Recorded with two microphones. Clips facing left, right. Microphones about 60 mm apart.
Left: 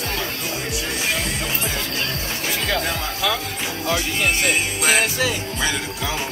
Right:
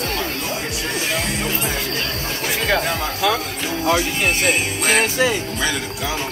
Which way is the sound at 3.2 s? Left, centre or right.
Right.